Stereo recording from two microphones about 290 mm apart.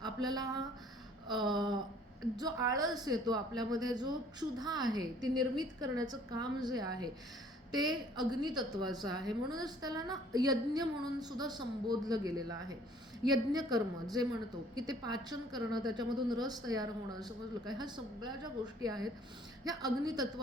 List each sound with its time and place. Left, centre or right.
0.0 s a woman's voice: centre